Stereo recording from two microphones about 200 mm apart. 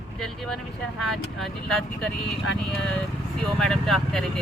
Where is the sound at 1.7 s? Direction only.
Centre (ahead or behind).